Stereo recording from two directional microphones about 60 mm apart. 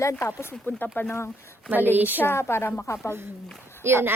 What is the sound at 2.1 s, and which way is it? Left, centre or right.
Speech, left.